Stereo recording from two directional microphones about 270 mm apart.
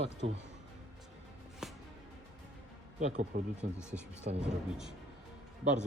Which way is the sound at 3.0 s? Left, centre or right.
Right.